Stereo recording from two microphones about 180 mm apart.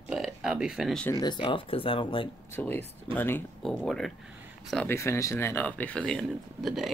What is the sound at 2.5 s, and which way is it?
Speech, 10° left (ahead or behind).